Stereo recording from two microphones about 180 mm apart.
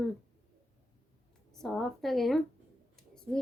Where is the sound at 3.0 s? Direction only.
5° left (ahead or behind).